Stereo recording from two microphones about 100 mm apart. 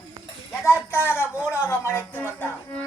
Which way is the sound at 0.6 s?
25° left (ahead or behind).